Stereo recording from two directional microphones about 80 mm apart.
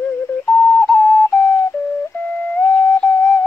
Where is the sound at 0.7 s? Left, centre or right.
Centre.